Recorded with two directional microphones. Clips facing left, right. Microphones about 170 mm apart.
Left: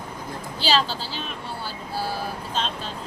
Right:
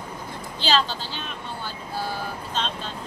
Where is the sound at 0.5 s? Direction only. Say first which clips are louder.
Even; 5° left (ahead or behind).